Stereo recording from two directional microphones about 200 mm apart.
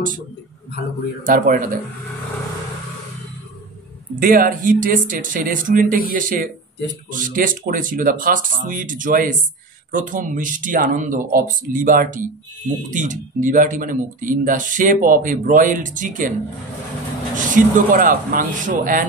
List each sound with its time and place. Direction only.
1.2 s speech: 45° right (ahead or behind)
4.2 s speech: 45° right (ahead or behind)
17.4 s speech: 40° right (ahead or behind)